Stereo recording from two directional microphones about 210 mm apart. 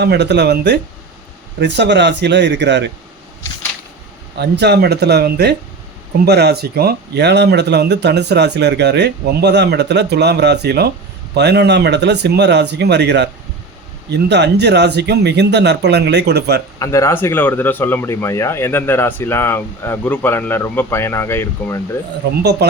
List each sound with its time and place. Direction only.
0.0 s speech: 55° right (ahead or behind)
4.4 s speech: 55° right (ahead or behind)
16.8 s speech: 15° left (ahead or behind)
22.6 s speech: 50° right (ahead or behind)